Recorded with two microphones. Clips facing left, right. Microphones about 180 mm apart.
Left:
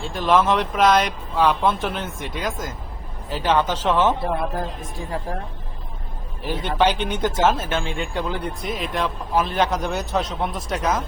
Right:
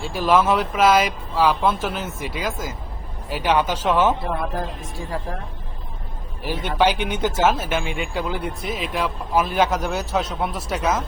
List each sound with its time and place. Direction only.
0.0 s speech: 5° right (ahead or behind)
4.2 s a man's voice: 25° left (ahead or behind)
6.5 s speech: 10° right (ahead or behind)